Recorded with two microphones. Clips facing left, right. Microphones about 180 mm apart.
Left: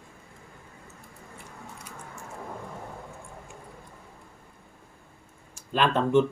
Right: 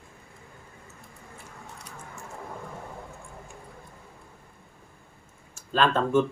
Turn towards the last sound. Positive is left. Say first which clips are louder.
# even
turn(degrees=15)  # may be behind; listen again after turning